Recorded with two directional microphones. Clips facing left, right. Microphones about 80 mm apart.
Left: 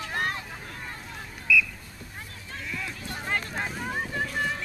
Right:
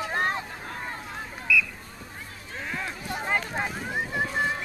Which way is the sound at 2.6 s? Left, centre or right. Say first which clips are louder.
Right 3 dB; right.